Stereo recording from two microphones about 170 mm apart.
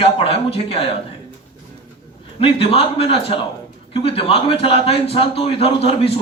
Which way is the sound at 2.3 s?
35° left (ahead or behind).